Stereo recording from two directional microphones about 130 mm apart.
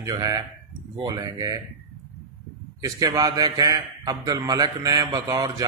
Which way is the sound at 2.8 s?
25° right (ahead or behind).